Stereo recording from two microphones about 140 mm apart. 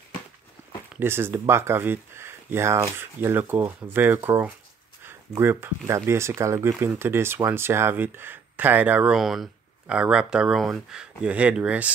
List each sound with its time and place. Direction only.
0.9 s speech: 15° right (ahead or behind)